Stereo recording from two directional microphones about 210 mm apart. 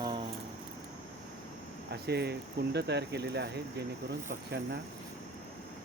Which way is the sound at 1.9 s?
50° right (ahead or behind).